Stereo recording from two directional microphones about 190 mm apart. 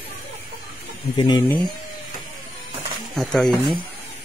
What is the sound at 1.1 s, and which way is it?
Speech, 25° left (ahead or behind).